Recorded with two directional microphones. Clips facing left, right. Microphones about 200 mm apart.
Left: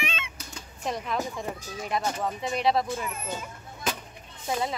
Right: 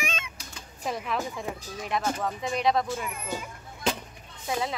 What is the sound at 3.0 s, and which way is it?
Speech, 10° right (ahead or behind).